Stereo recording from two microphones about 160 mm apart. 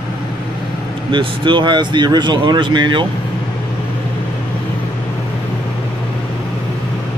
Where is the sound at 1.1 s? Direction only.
30° right (ahead or behind).